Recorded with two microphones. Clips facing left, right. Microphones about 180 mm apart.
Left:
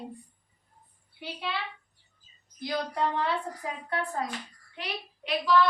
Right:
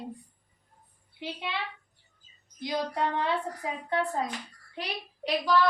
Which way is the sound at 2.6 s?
20° right (ahead or behind).